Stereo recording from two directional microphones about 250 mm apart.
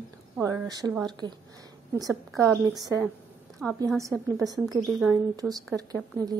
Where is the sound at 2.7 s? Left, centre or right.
Centre.